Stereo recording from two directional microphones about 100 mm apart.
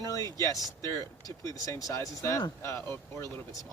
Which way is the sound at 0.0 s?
30° left (ahead or behind).